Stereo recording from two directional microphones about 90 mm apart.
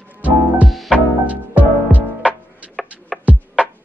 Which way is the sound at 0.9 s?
15° right (ahead or behind).